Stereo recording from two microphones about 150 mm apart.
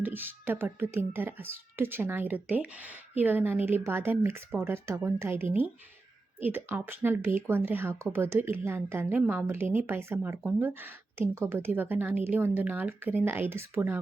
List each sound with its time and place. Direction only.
0.0 s speech: 15° right (ahead or behind)